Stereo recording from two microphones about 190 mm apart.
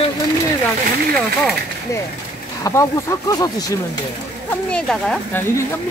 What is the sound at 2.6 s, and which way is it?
Speech, 15° left (ahead or behind).